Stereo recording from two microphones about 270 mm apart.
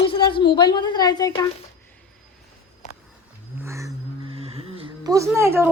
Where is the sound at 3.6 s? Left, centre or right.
Centre.